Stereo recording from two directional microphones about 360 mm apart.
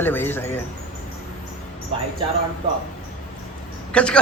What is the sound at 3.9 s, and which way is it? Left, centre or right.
Speech, centre.